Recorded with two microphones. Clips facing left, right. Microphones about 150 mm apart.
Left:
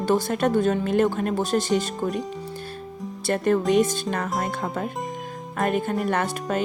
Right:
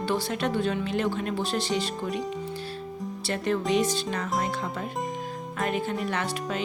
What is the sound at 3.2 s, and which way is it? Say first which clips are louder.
Speech: left 6 dB; 50° left (ahead or behind).